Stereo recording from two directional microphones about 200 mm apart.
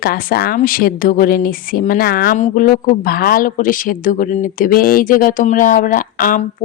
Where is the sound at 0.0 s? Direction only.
50° left (ahead or behind).